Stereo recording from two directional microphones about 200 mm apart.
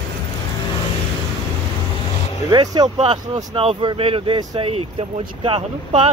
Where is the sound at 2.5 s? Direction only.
20° right (ahead or behind).